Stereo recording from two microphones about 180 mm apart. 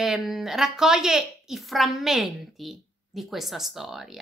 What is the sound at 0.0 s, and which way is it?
Speech, centre (ahead or behind).